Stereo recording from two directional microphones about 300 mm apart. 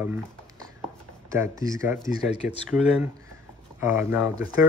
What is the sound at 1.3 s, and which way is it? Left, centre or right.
Speech, centre.